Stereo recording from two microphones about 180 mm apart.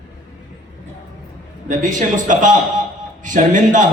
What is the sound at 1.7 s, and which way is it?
A man's voice, 45° right (ahead or behind).